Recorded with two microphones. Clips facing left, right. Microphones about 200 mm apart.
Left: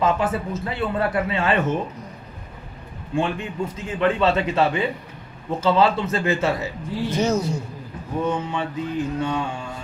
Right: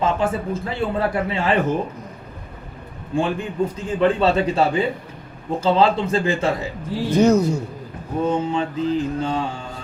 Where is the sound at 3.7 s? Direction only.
35° right (ahead or behind).